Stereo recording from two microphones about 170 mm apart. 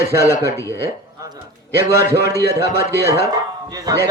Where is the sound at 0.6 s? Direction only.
15° left (ahead or behind).